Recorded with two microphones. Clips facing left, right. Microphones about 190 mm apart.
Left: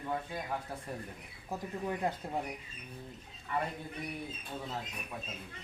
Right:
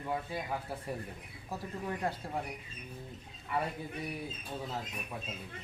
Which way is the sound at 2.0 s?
20° left (ahead or behind).